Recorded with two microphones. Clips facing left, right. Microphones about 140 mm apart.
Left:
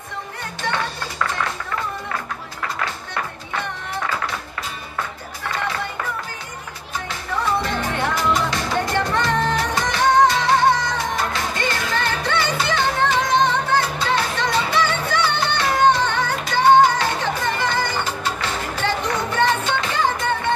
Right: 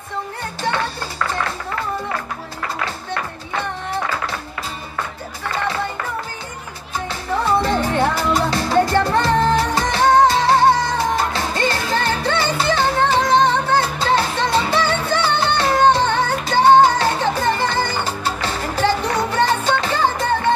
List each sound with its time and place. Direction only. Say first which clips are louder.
7.1 s music: right 4 dB; 30° right (ahead or behind)